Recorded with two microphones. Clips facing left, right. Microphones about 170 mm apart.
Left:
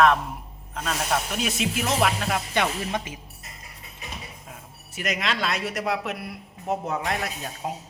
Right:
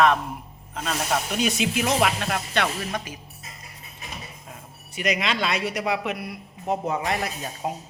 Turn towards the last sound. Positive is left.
turn(degrees=0)  # may be behind; listen again after turning